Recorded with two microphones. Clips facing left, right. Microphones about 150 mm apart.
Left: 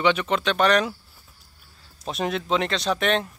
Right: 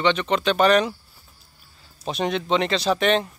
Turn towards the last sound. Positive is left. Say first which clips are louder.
# right 3 dB
turn(degrees=0)  # may be behind; listen again after turning